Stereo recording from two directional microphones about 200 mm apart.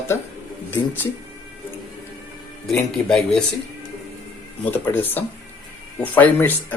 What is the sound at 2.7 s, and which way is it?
Speech, centre (ahead or behind).